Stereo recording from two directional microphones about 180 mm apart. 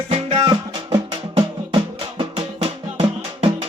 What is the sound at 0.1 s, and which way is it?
Music, 35° right (ahead or behind).